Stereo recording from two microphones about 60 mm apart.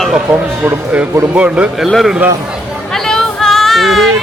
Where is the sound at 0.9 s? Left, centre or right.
Centre.